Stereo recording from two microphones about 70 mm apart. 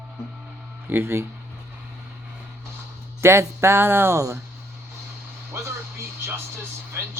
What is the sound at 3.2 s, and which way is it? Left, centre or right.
Speech, right.